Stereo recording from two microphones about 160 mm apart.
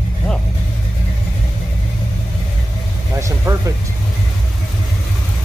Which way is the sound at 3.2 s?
20° right (ahead or behind).